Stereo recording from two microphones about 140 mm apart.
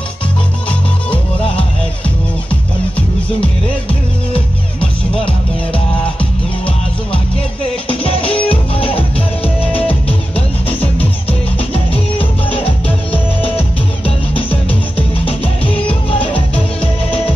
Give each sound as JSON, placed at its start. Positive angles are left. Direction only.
{"t": 0.7, "sound": "music", "side_deg": 40}
{"t": 4.3, "sound": "music", "side_deg": 40}
{"t": 7.9, "sound": "music", "side_deg": 40}
{"t": 9.6, "sound": "music", "side_deg": 10}
{"t": 11.0, "sound": "music", "side_deg": 40}